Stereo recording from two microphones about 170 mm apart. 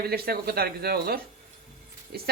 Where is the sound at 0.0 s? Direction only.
65° right (ahead or behind).